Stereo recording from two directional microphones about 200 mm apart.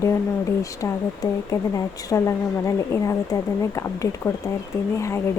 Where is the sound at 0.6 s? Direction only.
15° left (ahead or behind).